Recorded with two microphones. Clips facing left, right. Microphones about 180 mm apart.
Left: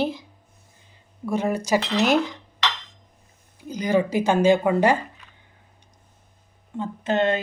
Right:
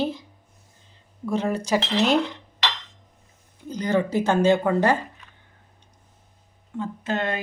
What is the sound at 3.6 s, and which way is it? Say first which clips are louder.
Speech: left 2 dB; 10° left (ahead or behind).